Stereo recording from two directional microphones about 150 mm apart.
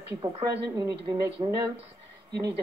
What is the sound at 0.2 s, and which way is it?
Speech, 25° right (ahead or behind).